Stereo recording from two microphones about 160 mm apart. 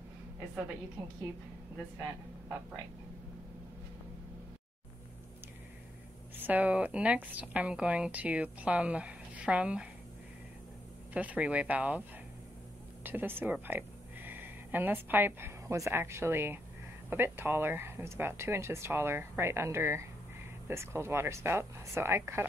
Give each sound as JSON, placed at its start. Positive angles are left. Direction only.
{"t": 6.3, "sound": "a woman's voice", "side_deg": -10}
{"t": 11.1, "sound": "a woman's voice", "side_deg": -10}
{"t": 13.0, "sound": "a woman's voice", "side_deg": -10}